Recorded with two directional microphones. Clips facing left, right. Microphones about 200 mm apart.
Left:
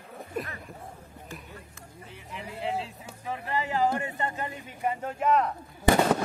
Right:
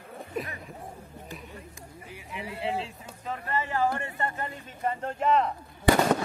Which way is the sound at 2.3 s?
Centre (ahead or behind).